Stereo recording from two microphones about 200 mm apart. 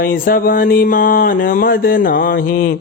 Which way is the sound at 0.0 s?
45° left (ahead or behind).